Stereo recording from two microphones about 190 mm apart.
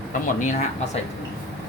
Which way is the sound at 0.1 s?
40° left (ahead or behind).